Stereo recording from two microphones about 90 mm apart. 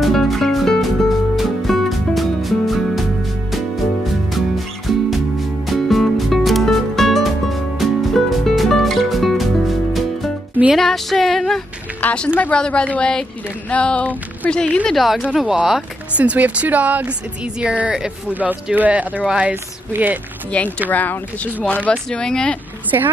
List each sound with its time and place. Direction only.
0.0 s music: 5° left (ahead or behind)
5.7 s music: centre (ahead or behind)
10.7 s a sound: centre (ahead or behind)
12.0 s a sound: 15° left (ahead or behind)
12.4 s a woman's voice: 15° left (ahead or behind); by 20.2 s 25° right (ahead or behind)
20.5 s a woman's voice: 15° left (ahead or behind)